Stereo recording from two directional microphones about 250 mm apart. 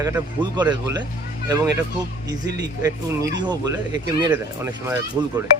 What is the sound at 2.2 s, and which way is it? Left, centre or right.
Speech, centre.